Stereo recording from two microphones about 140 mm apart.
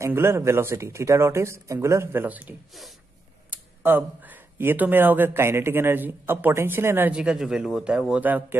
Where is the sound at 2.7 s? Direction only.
Centre (ahead or behind).